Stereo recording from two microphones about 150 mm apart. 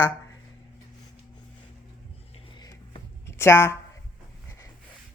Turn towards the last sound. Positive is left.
turn(degrees=15)  # may be behind; listen again after turning